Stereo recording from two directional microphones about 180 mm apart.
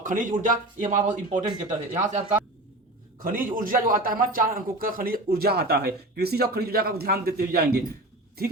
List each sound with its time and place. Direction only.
0.0 s a man's voice: 45° right (ahead or behind)